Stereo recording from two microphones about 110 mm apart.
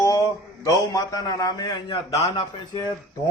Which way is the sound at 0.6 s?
30° left (ahead or behind).